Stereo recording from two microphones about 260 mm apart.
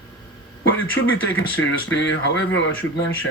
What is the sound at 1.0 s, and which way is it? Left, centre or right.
Speech, left.